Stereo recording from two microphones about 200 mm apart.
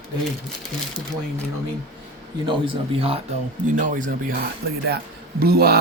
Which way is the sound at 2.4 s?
25° right (ahead or behind).